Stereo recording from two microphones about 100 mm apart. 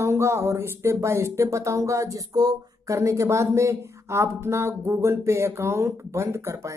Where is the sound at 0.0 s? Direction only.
30° right (ahead or behind).